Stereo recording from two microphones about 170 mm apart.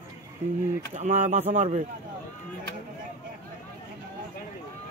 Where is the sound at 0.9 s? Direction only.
40° right (ahead or behind).